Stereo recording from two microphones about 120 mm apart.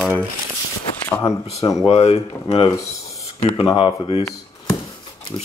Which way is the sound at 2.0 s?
55° left (ahead or behind).